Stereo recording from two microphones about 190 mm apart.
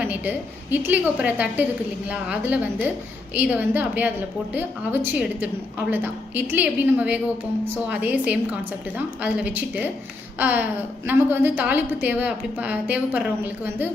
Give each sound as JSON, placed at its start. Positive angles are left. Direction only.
{"t": 0.0, "sound": "a woman's voice", "side_deg": -10}